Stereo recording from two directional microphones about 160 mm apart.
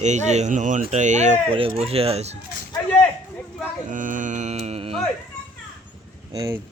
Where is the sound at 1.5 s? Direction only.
35° right (ahead or behind).